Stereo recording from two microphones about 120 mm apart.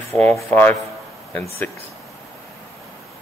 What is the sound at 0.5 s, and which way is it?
A man's voice, 15° left (ahead or behind).